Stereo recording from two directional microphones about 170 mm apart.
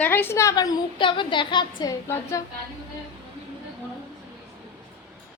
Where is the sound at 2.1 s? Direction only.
15° left (ahead or behind).